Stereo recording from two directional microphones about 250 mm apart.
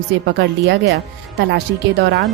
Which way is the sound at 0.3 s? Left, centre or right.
Right.